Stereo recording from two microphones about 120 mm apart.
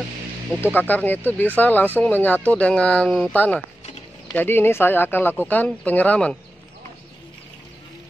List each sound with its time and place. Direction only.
0.7 s speech: 15° left (ahead or behind)